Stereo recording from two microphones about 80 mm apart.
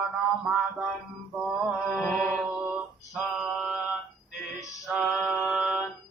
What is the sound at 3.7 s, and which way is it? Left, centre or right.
Music, right.